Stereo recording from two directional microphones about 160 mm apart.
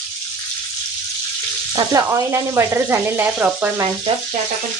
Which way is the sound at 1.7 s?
20° right (ahead or behind).